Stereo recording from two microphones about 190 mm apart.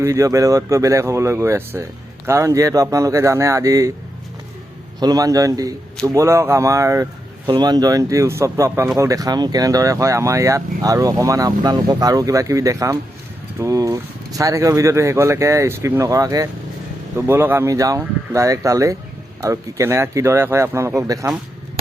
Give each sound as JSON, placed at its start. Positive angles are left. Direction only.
{"t": 0.0, "sound": "speech", "side_deg": -15}
{"t": 4.9, "sound": "a man's voice", "side_deg": -20}